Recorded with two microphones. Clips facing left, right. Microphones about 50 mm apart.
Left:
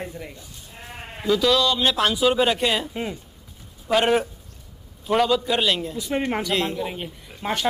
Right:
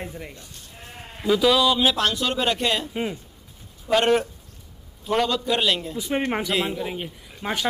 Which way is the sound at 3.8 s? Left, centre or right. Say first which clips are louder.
Even; centre.